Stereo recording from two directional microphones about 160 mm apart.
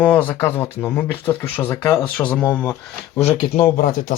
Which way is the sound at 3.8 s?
55° left (ahead or behind).